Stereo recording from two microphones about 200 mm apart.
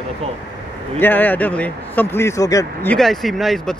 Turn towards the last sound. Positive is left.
turn(degrees=0)  # may be behind; listen again after turning